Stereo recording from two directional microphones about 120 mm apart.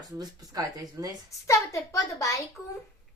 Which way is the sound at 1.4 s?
25° left (ahead or behind).